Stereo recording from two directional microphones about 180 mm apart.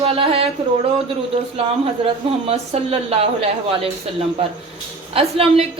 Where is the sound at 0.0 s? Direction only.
30° right (ahead or behind).